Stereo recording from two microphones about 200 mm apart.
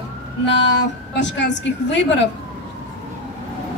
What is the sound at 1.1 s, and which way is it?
A woman's voice, 60° left (ahead or behind).